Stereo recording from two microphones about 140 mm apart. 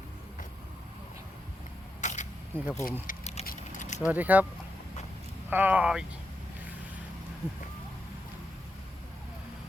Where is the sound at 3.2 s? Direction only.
50° left (ahead or behind).